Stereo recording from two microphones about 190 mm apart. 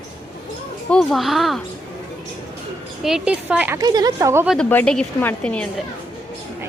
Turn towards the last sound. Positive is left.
turn(degrees=5)  # may be behind; listen again after turning